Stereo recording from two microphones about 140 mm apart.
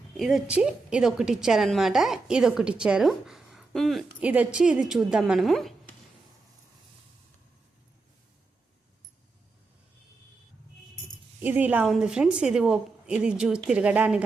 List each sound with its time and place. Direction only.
0.2 s a woman's voice: centre (ahead or behind)
11.4 s a woman's voice: 10° right (ahead or behind)